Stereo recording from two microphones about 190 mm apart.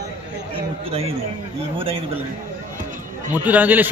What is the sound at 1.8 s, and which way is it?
Speech, 30° right (ahead or behind).